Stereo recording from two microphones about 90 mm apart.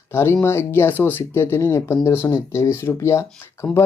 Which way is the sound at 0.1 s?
25° left (ahead or behind).